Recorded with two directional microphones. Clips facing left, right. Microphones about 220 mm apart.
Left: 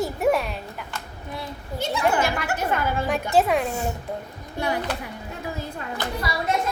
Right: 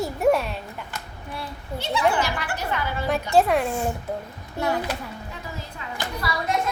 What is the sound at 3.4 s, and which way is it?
Speech, centre (ahead or behind).